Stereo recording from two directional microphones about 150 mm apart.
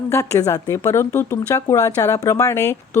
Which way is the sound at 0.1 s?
20° left (ahead or behind).